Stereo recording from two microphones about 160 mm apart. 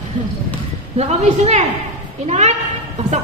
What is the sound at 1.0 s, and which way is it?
A woman's voice, 40° right (ahead or behind).